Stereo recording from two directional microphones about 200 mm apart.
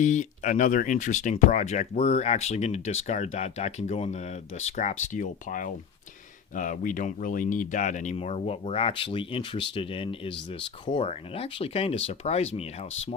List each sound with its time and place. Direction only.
0.0 s speech: 40° left (ahead or behind)